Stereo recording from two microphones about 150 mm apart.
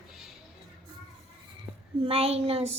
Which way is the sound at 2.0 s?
40° right (ahead or behind).